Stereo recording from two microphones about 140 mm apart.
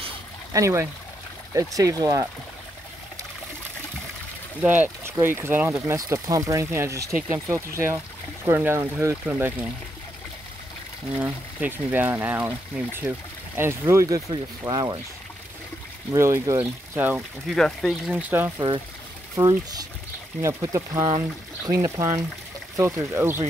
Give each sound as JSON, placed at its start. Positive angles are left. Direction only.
{"t": 0.5, "sound": "speech", "side_deg": -20}
{"t": 4.6, "sound": "speech", "side_deg": -10}
{"t": 11.1, "sound": "speech", "side_deg": -10}
{"t": 16.1, "sound": "speech", "side_deg": -20}
{"t": 17.5, "sound": "speech", "side_deg": 0}
{"t": 18.6, "sound": "speech", "side_deg": -30}